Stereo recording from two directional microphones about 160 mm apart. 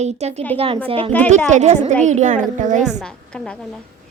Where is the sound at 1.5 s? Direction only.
50° right (ahead or behind).